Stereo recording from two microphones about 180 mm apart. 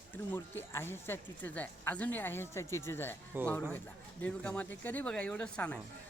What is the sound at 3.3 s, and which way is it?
Speech, 10° right (ahead or behind).